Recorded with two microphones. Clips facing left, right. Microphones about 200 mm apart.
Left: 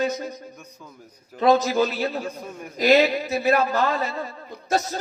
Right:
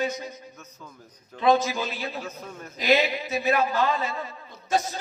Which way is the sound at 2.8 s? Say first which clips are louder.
Left 5 dB; 45° left (ahead or behind).